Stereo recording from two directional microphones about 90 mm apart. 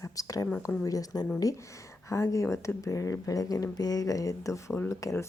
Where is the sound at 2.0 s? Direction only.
35° left (ahead or behind).